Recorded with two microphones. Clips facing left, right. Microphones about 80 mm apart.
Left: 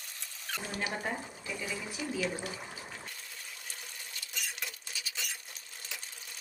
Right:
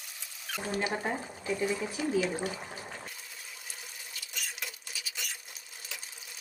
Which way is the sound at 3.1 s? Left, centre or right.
Centre.